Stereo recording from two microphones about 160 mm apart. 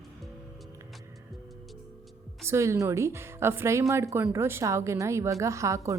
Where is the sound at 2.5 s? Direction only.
20° right (ahead or behind).